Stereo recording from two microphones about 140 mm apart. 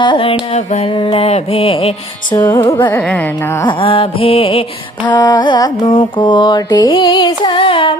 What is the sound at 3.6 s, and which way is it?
Mantra, 40° left (ahead or behind).